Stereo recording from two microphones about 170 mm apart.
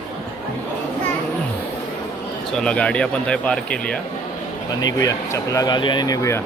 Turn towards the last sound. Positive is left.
turn(degrees=20)  # may be behind; listen again after turning